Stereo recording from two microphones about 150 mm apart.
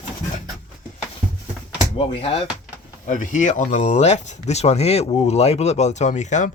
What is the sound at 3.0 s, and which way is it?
Speech, 55° left (ahead or behind).